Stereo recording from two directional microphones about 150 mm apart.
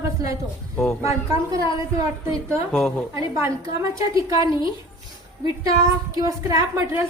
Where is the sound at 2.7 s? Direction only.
5° left (ahead or behind).